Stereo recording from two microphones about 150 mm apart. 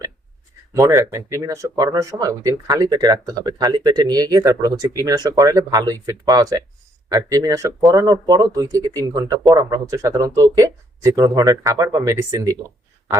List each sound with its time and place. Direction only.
0.8 s speech: 20° right (ahead or behind)